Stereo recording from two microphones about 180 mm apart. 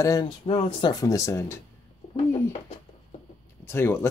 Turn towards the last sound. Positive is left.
turn(degrees=15)  # may be behind; listen again after turning